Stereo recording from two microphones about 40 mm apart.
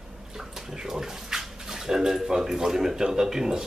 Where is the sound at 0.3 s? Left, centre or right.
Centre.